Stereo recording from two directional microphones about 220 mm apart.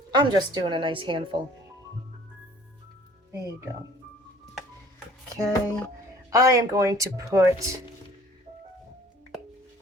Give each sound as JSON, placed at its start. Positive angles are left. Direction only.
{"t": 0.1, "sound": "a woman's voice", "side_deg": -20}
{"t": 3.3, "sound": "speech", "side_deg": -15}
{"t": 5.4, "sound": "speech", "side_deg": 5}
{"t": 6.3, "sound": "speech", "side_deg": -15}